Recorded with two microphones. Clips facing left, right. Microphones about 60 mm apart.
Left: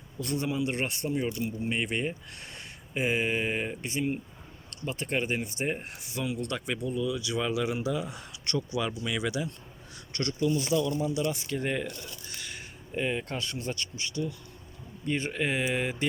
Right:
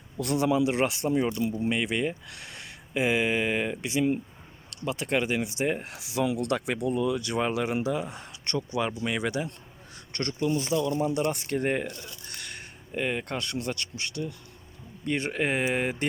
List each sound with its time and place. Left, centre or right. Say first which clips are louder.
0.2 s speech: right 6 dB; right
10.9 s speech: right 3 dB; right
12.3 s speech: right 1 dB; right